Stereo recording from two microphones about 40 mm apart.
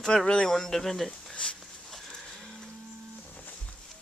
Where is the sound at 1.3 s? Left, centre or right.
Left.